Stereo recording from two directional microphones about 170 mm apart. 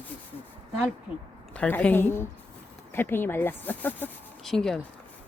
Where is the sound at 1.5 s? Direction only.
10° left (ahead or behind).